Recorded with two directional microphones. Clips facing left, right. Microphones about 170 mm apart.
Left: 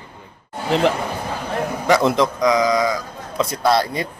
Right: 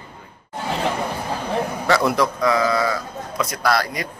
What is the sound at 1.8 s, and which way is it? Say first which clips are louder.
A man's voice: left 3 dB; 20° left (ahead or behind).